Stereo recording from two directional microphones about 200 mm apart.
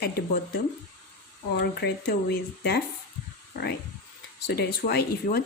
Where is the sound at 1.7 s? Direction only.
55° left (ahead or behind).